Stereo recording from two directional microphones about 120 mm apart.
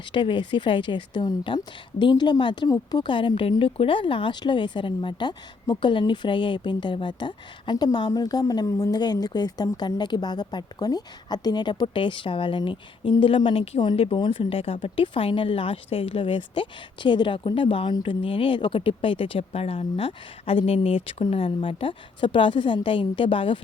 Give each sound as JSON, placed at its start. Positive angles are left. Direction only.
{"t": 0.1, "sound": "a woman's voice", "side_deg": 45}